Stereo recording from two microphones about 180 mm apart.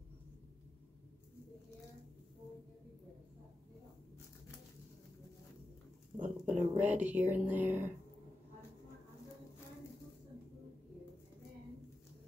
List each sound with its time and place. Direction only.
6.1 s speech: 40° right (ahead or behind)
6.8 s speech: 10° right (ahead or behind)